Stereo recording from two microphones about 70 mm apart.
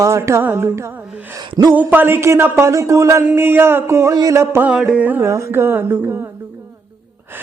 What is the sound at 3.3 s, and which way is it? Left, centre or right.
Speech, right.